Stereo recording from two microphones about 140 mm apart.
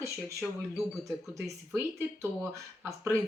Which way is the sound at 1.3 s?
20° right (ahead or behind).